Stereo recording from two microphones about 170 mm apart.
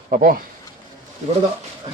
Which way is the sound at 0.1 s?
50° right (ahead or behind).